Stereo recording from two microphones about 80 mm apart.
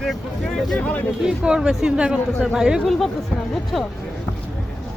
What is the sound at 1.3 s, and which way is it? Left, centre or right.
Speech, centre.